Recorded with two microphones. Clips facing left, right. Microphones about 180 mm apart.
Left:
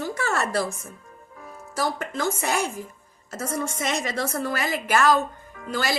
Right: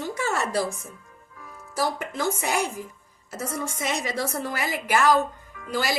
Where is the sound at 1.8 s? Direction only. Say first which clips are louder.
Even; 15° right (ahead or behind).